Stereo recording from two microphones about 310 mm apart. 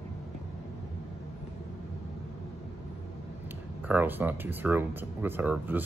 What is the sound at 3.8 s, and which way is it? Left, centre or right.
Speech, centre.